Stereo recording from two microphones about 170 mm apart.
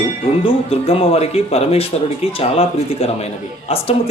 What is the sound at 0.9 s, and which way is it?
Speech, 35° left (ahead or behind).